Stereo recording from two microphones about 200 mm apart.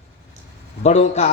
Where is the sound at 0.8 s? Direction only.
35° left (ahead or behind).